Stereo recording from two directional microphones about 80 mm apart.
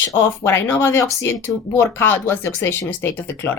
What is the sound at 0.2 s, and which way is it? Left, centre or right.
Speech, left.